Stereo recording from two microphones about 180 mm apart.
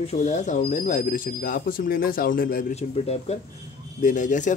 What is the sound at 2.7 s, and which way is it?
A man's voice, 35° left (ahead or behind).